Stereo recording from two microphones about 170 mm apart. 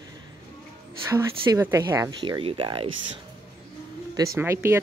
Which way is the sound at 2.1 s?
25° right (ahead or behind).